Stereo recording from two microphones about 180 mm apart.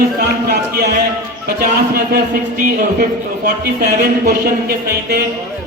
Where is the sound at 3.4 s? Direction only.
60° right (ahead or behind).